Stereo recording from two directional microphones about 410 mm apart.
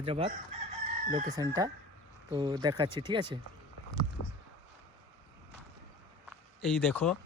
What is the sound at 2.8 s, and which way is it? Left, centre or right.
Speech, centre.